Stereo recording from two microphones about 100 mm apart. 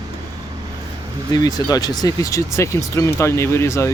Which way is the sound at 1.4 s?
40° left (ahead or behind).